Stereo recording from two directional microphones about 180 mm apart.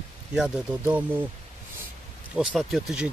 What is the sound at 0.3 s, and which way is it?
Speech, 5° right (ahead or behind).